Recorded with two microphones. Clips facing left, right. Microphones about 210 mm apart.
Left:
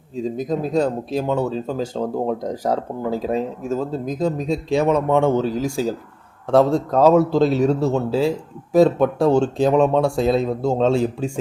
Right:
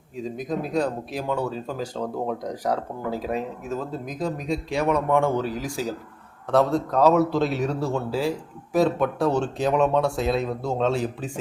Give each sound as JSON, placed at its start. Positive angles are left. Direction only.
{"t": 0.3, "sound": "speech", "side_deg": 25}